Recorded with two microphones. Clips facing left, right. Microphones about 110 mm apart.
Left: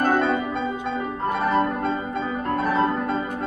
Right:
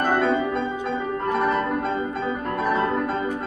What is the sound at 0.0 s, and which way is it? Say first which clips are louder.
Music: even; centre (ahead or behind).